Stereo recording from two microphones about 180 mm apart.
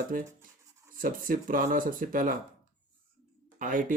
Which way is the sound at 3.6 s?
45° right (ahead or behind).